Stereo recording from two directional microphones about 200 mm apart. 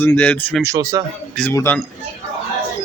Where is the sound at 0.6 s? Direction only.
15° right (ahead or behind).